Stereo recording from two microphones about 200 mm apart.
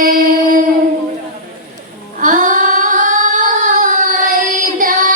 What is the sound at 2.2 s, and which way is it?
Singing, 40° right (ahead or behind).